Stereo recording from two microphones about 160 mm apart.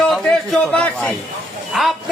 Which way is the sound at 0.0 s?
5° left (ahead or behind).